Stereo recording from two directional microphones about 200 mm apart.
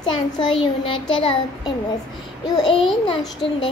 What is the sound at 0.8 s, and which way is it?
Speech, 25° left (ahead or behind).